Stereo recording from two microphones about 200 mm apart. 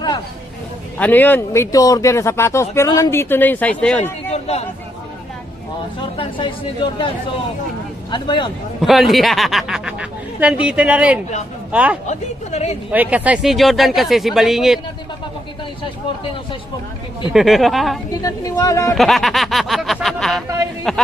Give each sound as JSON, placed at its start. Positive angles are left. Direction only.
{"t": 0.9, "sound": "speech", "side_deg": 10}
{"t": 4.3, "sound": "a sound", "side_deg": 30}
{"t": 6.1, "sound": "speech", "side_deg": 25}
{"t": 8.1, "sound": "speech", "side_deg": 25}
{"t": 8.8, "sound": "a woman's voice", "side_deg": 0}
{"t": 12.0, "sound": "speech", "side_deg": 35}
{"t": 12.9, "sound": "a woman's voice", "side_deg": -5}
{"t": 17.3, "sound": "a woman's voice", "side_deg": 0}
{"t": 18.2, "sound": "speech", "side_deg": 15}
{"t": 18.9, "sound": "a woman's voice", "side_deg": 0}